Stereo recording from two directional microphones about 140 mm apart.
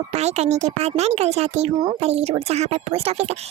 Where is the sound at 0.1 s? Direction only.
50° right (ahead or behind).